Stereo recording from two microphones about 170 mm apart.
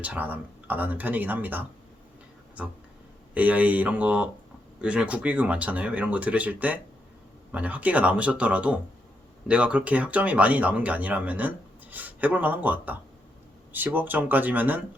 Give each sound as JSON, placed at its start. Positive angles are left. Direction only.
{"t": 0.0, "sound": "speech", "side_deg": -10}
{"t": 3.3, "sound": "speech", "side_deg": -10}